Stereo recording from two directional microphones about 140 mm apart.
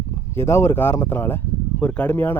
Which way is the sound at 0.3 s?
20° left (ahead or behind).